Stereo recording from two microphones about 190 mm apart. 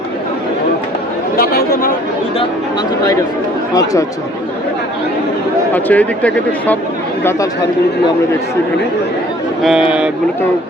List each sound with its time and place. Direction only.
1.4 s chatter: 50° left (ahead or behind)
5.7 s speech: 10° left (ahead or behind)
9.6 s speech: 5° right (ahead or behind)